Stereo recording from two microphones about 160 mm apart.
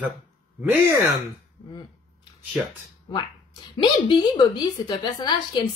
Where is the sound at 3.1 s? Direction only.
30° left (ahead or behind).